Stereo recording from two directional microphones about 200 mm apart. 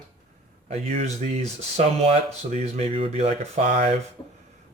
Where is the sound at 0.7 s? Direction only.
35° right (ahead or behind).